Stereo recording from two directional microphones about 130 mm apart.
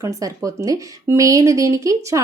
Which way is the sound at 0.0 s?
25° right (ahead or behind).